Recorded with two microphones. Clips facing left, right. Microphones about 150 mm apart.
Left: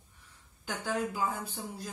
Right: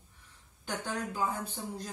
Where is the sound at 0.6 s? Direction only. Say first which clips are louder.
Left 3 dB; 10° left (ahead or behind).